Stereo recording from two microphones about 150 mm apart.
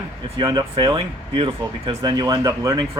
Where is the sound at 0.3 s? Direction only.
30° right (ahead or behind).